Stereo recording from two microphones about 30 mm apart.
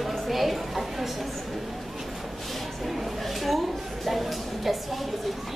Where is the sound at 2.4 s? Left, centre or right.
Centre.